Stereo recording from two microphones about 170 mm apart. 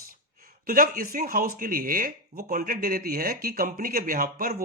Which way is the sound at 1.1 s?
55° right (ahead or behind).